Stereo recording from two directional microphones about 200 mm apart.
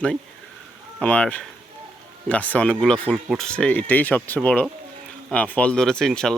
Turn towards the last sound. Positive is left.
turn(degrees=5)  # may be behind; listen again after turning